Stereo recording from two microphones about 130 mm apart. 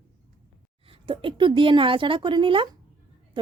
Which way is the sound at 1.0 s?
40° right (ahead or behind).